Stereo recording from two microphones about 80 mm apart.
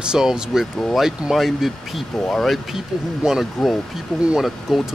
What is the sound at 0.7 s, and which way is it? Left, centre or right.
Speech, centre.